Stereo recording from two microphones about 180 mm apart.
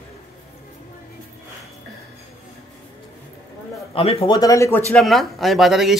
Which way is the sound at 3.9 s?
30° left (ahead or behind).